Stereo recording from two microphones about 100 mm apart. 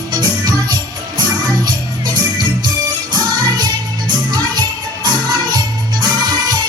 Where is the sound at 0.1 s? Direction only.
45° right (ahead or behind).